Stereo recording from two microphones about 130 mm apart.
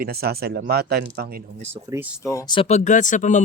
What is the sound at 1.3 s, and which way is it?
Speech, 90° right.